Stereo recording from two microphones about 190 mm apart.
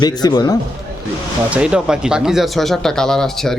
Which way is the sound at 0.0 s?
20° left (ahead or behind).